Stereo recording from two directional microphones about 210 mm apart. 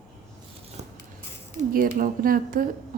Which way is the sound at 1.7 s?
40° right (ahead or behind).